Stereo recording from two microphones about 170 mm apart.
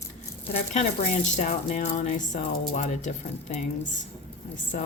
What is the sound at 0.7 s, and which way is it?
Speech, 45° left (ahead or behind).